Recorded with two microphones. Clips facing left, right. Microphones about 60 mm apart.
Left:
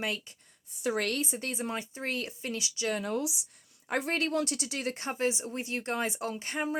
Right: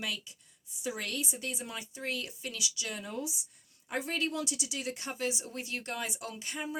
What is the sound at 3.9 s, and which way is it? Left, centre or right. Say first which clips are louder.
Speech: left 4 dB; left.